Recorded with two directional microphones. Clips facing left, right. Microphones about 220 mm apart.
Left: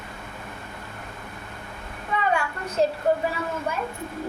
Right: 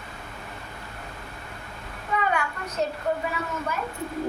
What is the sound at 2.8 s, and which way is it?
Speech, 30° left (ahead or behind).